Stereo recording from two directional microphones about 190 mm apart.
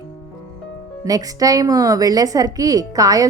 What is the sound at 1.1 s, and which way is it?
A woman's voice, 20° right (ahead or behind).